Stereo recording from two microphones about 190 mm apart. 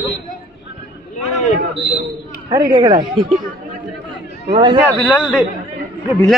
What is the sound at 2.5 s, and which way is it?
Speech, 20° right (ahead or behind).